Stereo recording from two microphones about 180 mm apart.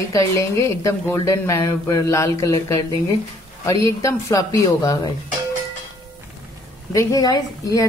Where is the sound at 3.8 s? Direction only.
15° left (ahead or behind).